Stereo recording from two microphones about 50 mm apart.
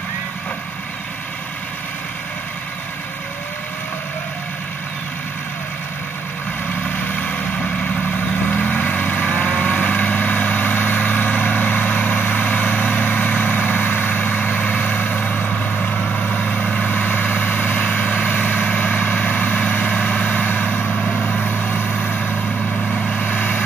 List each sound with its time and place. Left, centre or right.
8.5 s vehicle: left
21.5 s vehicle: left